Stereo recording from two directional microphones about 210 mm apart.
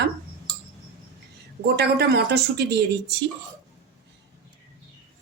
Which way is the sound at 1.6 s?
50° right (ahead or behind).